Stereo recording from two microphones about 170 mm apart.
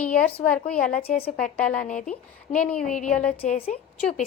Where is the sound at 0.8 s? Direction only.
60° left (ahead or behind).